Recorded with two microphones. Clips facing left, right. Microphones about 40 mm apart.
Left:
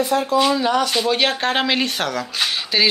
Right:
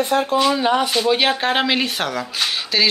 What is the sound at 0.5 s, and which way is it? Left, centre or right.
Speech, right.